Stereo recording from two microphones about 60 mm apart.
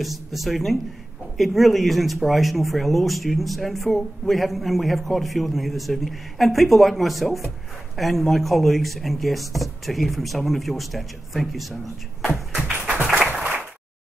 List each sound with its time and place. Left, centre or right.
0.0 s speech: centre
12.9 s applause: right